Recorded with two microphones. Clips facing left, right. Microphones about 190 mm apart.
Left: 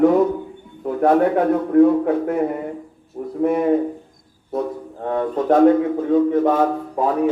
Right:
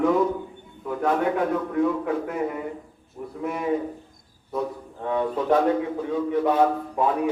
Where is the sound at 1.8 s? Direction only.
55° left (ahead or behind).